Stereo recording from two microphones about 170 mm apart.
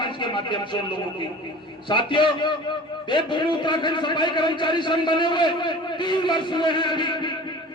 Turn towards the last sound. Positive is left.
turn(degrees=25)  # may be behind; listen again after turning